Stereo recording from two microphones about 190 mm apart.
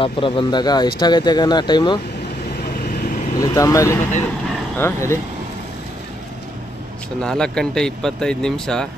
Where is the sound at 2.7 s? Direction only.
50° left (ahead or behind).